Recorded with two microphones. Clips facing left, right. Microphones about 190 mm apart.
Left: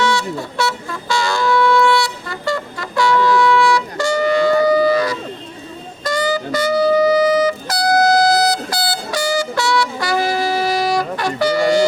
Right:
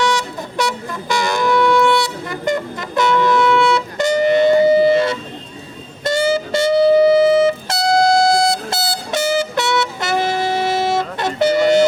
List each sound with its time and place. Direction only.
0.0 s wind instrument: 15° right (ahead or behind)
6.1 s music: 25° right (ahead or behind)